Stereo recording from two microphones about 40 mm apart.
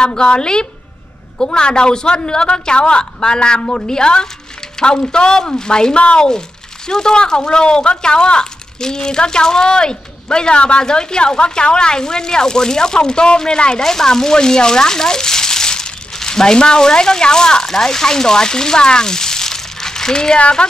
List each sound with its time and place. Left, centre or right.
0.0 s speech: left
20.3 s speech: left